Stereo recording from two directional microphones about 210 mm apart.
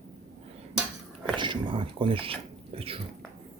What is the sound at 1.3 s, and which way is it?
Speech, 20° right (ahead or behind).